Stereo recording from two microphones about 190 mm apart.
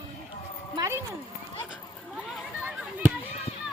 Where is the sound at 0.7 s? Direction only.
15° right (ahead or behind).